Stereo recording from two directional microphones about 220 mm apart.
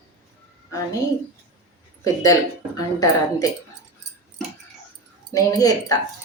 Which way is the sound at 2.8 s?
15° left (ahead or behind).